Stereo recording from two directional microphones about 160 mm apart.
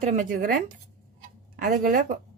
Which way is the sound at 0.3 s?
60° right (ahead or behind).